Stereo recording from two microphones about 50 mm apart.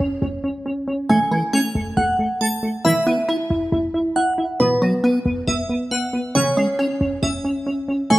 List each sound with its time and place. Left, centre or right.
1.0 s music: centre